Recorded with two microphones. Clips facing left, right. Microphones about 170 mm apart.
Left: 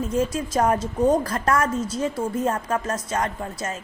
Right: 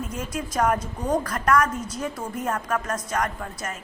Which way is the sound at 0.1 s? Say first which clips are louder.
Left 7 dB; 30° left (ahead or behind).